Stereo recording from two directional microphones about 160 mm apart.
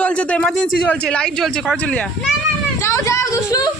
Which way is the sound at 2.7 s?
15° left (ahead or behind).